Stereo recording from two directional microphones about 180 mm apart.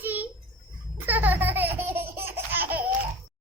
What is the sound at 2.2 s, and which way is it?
Laughter, 10° right (ahead or behind).